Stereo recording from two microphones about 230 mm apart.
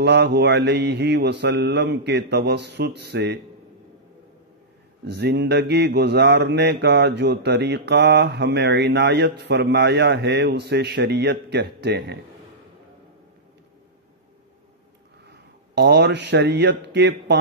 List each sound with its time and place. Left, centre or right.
0.0 s mantra: right
5.0 s mantra: right
15.2 s speech: right